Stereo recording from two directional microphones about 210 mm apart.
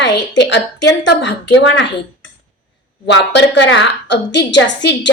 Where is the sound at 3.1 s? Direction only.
55° left (ahead or behind).